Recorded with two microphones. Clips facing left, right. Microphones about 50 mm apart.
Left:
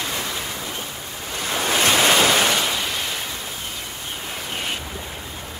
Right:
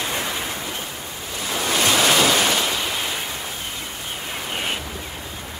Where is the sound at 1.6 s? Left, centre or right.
Centre.